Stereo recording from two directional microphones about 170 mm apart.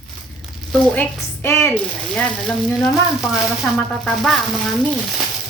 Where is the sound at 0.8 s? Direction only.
10° left (ahead or behind).